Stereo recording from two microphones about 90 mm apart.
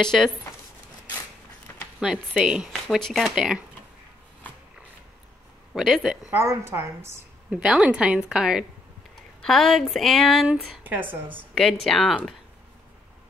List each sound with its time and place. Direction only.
0.0 s speech: 5° left (ahead or behind)
2.0 s speech: 10° right (ahead or behind)
5.7 s speech: centre (ahead or behind)
6.3 s a woman's voice: 30° right (ahead or behind)
7.5 s speech: 10° right (ahead or behind)
9.4 s speech: 5° left (ahead or behind)
10.5 s a woman's voice: 20° right (ahead or behind)
11.5 s speech: 5° left (ahead or behind)